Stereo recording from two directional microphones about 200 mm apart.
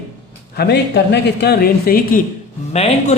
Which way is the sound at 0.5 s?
55° left (ahead or behind).